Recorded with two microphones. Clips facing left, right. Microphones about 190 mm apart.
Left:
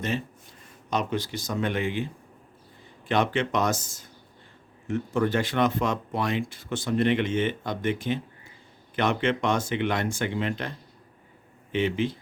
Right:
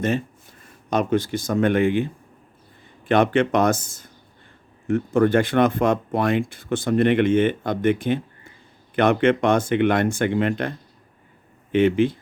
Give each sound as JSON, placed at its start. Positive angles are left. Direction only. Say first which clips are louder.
{"t": 0.9, "sound": "speech", "louder": "right 7 dB", "side_deg": -50}
{"t": 3.1, "sound": "speech", "louder": "right 7 dB", "side_deg": -55}